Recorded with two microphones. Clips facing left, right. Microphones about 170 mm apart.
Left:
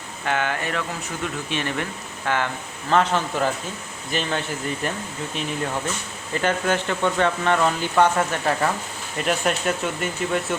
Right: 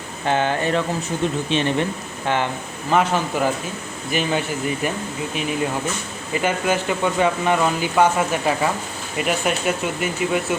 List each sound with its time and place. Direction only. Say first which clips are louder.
0.3 s speech: right 5 dB; 30° right (ahead or behind)
2.9 s speech: right 1 dB; 10° right (ahead or behind)